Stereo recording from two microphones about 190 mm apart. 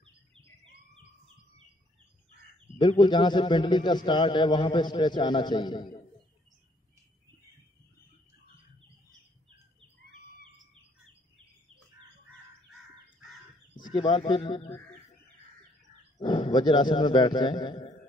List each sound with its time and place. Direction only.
0.0 s bird: 30° right (ahead or behind)
2.8 s a man's voice: 25° left (ahead or behind)
13.9 s a man's voice: 25° left (ahead or behind)
16.2 s a man's voice: 20° left (ahead or behind)